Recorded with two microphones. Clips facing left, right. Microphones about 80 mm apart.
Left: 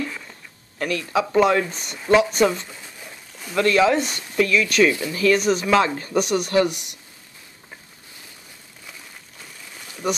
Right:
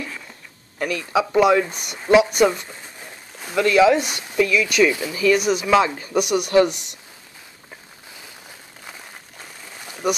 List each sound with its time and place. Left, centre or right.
0.7 s speech: right
6.5 s speech: right